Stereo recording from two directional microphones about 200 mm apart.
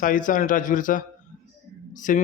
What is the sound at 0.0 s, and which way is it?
A man's voice, 40° left (ahead or behind).